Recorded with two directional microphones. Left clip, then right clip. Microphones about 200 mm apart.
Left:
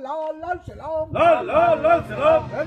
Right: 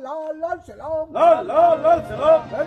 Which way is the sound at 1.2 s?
40° left (ahead or behind).